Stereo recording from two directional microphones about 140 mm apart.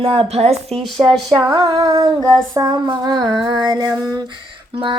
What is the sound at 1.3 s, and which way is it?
Child singing, 30° right (ahead or behind).